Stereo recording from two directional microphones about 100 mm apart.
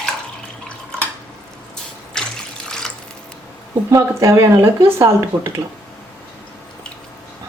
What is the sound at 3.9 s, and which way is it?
Speech, 30° right (ahead or behind).